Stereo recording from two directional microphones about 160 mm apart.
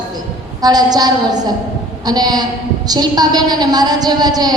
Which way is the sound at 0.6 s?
25° right (ahead or behind).